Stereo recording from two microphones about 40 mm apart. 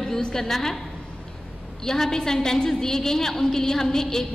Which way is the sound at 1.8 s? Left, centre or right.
Centre.